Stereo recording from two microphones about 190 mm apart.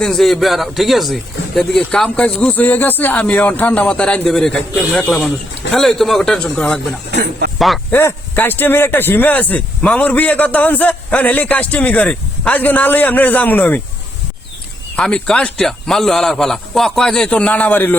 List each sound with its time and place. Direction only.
0.0 s speech: centre (ahead or behind)
7.2 s speech: 60° right (ahead or behind)
7.6 s speech: centre (ahead or behind)
7.9 s speech: 10° left (ahead or behind)
14.9 s speech: 5° left (ahead or behind)